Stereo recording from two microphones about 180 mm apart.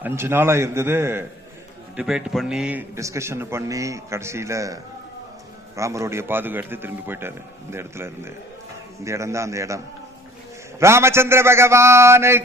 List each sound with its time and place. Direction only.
0.0 s a man's voice: 15° right (ahead or behind)